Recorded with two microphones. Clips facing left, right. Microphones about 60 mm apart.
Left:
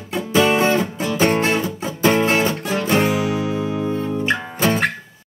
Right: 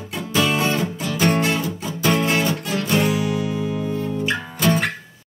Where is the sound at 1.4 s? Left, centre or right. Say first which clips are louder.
Left 2 dB; left.